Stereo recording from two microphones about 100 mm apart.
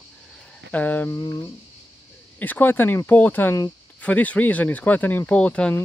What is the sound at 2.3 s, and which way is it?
Speech, 15° left (ahead or behind).